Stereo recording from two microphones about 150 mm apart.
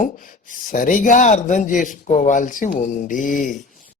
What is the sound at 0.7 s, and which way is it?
Speech, 65° left (ahead or behind).